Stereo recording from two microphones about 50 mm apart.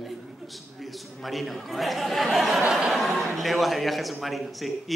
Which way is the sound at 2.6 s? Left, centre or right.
Centre.